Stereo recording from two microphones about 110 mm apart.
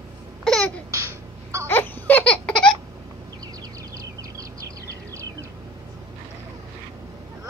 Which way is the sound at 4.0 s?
30° right (ahead or behind).